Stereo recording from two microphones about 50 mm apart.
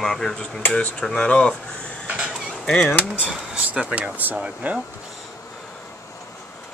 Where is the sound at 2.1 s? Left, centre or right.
Centre.